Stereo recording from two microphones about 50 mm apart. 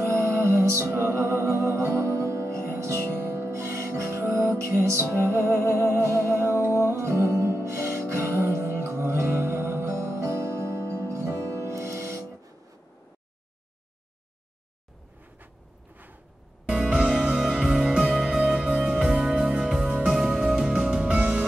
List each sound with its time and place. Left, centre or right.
0.0 s music: right
2.7 s music: right
16.6 s music: centre